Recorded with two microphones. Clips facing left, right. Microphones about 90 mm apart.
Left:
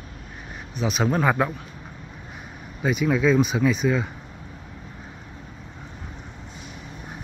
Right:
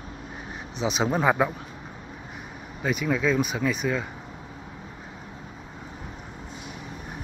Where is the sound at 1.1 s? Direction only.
10° right (ahead or behind).